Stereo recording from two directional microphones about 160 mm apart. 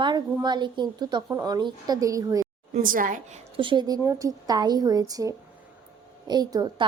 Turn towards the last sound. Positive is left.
turn(degrees=-25)  # may be behind; listen again after turning